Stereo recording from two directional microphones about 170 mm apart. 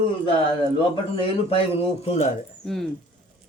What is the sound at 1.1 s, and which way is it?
Speech, 35° left (ahead or behind).